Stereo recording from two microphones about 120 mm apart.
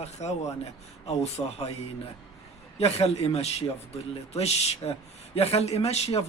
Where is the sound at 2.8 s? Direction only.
60° left (ahead or behind).